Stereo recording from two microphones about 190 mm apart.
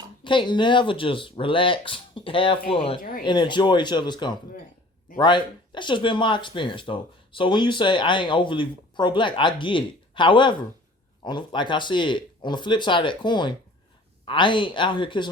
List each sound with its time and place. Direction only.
0.3 s speech: 25° left (ahead or behind)